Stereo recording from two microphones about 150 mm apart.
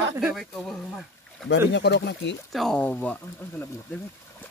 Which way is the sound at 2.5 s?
Centre (ahead or behind).